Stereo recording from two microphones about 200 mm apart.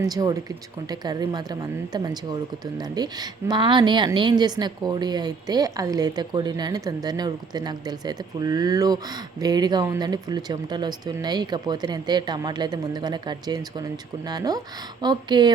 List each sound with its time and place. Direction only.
0.0 s speech: 20° right (ahead or behind)